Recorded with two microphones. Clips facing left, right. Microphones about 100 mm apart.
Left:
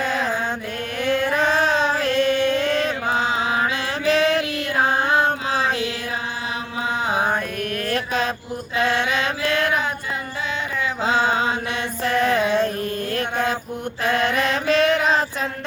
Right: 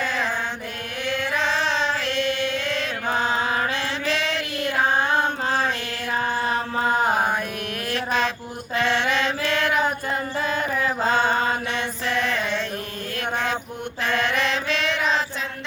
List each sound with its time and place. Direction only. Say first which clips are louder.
0.0 s mantra: left 3 dB; 45° left (ahead or behind)
1.0 s a sound: left 5 dB; 45° left (ahead or behind)
1.9 s music: left 5 dB; 45° left (ahead or behind)
3.1 s mantra: right 2 dB; 45° right (ahead or behind)
4.0 s a sound: left 10 dB; 45° left (ahead or behind)
6.8 s mantra: right 1 dB; 45° right (ahead or behind)
7.9 s mantra: right 1 dB; 45° left (ahead or behind)
11.0 s mantra: left 2 dB; 45° right (ahead or behind)
12.2 s music: left 7 dB; 45° left (ahead or behind)
13.1 s mantra: even; 40° left (ahead or behind)